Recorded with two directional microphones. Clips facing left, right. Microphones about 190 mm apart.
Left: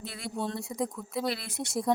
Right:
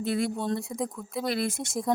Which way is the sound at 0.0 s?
50° right (ahead or behind).